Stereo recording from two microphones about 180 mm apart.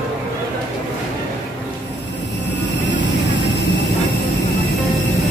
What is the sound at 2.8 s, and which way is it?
Vehicle, 80° left.